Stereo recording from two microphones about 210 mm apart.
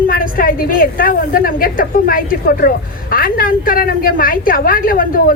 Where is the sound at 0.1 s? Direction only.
40° left (ahead or behind).